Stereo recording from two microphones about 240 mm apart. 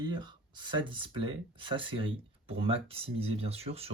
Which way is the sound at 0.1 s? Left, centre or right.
Centre.